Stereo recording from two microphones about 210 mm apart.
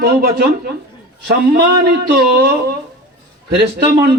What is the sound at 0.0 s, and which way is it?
Speech, 50° right (ahead or behind).